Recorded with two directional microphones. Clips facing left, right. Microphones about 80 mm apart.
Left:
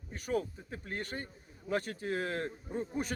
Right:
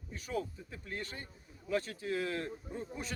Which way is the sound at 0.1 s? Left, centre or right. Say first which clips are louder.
Left 4 dB; left.